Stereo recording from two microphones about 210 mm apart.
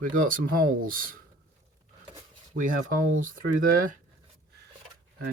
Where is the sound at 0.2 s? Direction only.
40° right (ahead or behind).